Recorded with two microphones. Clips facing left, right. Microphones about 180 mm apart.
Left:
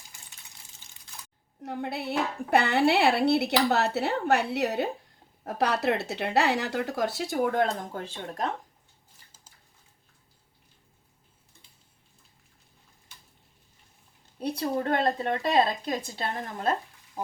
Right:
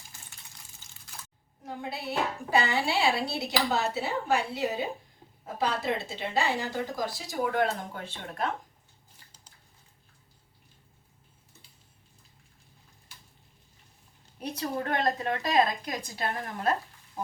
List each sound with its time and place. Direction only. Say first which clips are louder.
1.6 s speech: left 4 dB; 65° left (ahead or behind)
7.4 s speech: even; 45° left (ahead or behind)
14.3 s a woman's voice: left 4 dB; 30° left (ahead or behind)